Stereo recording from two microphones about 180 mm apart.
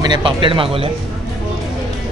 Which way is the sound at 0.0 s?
25° right (ahead or behind).